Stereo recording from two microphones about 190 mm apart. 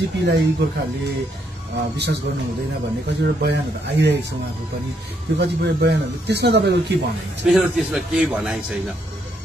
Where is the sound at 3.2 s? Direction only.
60° right (ahead or behind).